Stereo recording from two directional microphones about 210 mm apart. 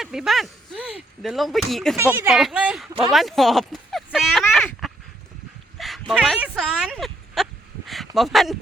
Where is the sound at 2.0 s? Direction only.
10° right (ahead or behind).